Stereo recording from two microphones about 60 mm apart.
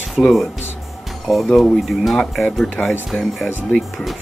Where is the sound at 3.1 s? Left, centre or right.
Centre.